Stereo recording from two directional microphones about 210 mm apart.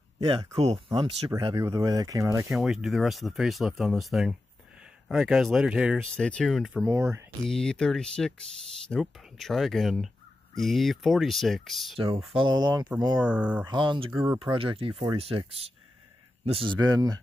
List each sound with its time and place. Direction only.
0.3 s speech: 25° right (ahead or behind)
1.3 s speech: 15° right (ahead or behind)
2.5 s speech: centre (ahead or behind)
6.9 s speech: 15° right (ahead or behind)
7.4 s speech: 5° left (ahead or behind)
12.4 s speech: 20° right (ahead or behind)
13.2 s speech: 5° right (ahead or behind)
13.7 s speech: 20° right (ahead or behind)
14.1 s speech: 10° right (ahead or behind)
14.4 s speech: 25° right (ahead or behind)
16.7 s speech: 20° right (ahead or behind)